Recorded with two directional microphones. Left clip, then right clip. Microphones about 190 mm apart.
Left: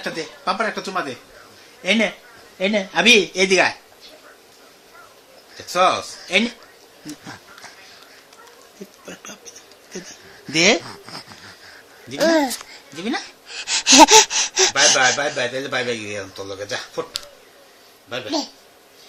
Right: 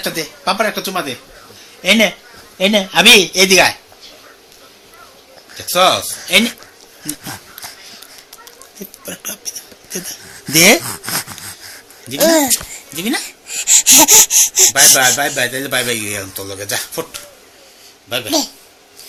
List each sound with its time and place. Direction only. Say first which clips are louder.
0.0 s speech: right 5 dB; 25° left (ahead or behind)
5.5 s speech: right 5 dB; 20° left (ahead or behind)
7.1 s a sound: right 7 dB; 15° left (ahead or behind)
9.0 s whispering: right 11 dB; 15° left (ahead or behind); by 11.3 s centre (ahead or behind)
12.0 s speech: right 5 dB; 20° left (ahead or behind)
18.1 s speech: right 7 dB; 10° left (ahead or behind)